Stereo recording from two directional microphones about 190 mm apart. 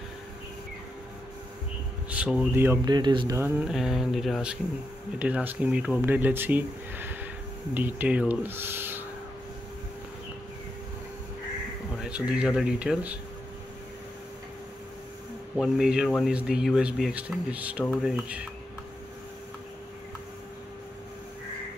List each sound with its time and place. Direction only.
2.0 s speech: 5° right (ahead or behind); by 3.3 s 25° right (ahead or behind)
3.3 s speech: 10° right (ahead or behind)
12.0 s speech: 5° right (ahead or behind)
15.5 s speech: centre (ahead or behind)